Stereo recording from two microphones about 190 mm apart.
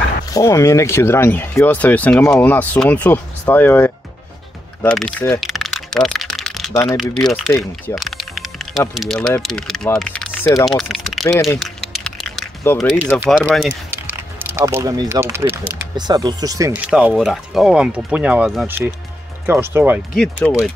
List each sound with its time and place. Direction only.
0.3 s speech: 15° left (ahead or behind)
4.8 s typing: 5° left (ahead or behind)
6.7 s speech: 15° left (ahead or behind)
7.0 s speech: centre (ahead or behind)
7.9 s typing: centre (ahead or behind)
9.4 s speech: 5° left (ahead or behind)
11.6 s a sound: centre (ahead or behind)
13.4 s speech: 5° left (ahead or behind)
13.8 s speech: 10° right (ahead or behind)